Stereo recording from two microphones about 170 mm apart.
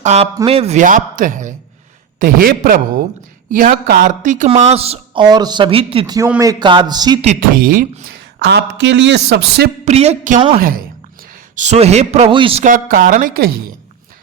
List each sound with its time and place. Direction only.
0.0 s a man's voice: 40° right (ahead or behind)
6.1 s a man's voice: 10° right (ahead or behind)
6.4 s a man's voice: 25° right (ahead or behind)
7.3 s speech: 55° right (ahead or behind)
8.4 s a woman's voice: 75° right (ahead or behind)
9.8 s a woman's voice: 40° right (ahead or behind)
10.6 s speech: 55° right (ahead or behind); by 12.6 s 30° right (ahead or behind)
12.6 s a woman's voice: 55° right (ahead or behind)